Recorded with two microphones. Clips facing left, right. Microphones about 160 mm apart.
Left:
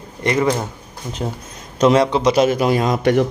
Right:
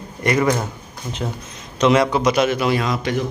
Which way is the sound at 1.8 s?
40° left (ahead or behind).